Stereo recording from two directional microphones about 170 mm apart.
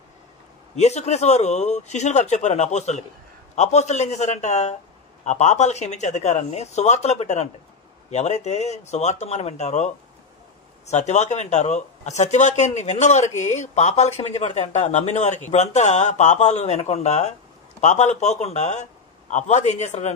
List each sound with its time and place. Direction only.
0.7 s a man's voice: 40° left (ahead or behind)
10.9 s speech: 40° left (ahead or behind)